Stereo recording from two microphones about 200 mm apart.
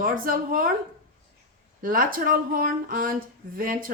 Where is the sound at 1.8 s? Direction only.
45° right (ahead or behind).